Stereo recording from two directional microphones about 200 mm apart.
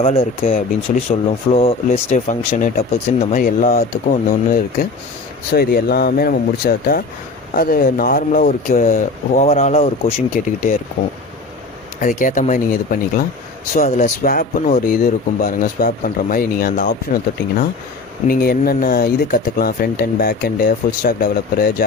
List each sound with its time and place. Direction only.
0.0 s speech: 30° left (ahead or behind)
11.9 s speech: 40° left (ahead or behind)
18.3 s speech: 50° left (ahead or behind)